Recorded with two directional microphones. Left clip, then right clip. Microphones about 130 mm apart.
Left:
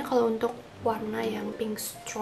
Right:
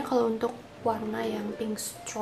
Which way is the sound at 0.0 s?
5° right (ahead or behind).